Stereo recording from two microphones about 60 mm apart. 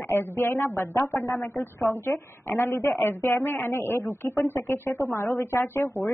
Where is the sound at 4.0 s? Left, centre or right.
Left.